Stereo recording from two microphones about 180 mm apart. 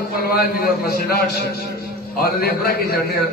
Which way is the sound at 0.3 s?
55° left (ahead or behind).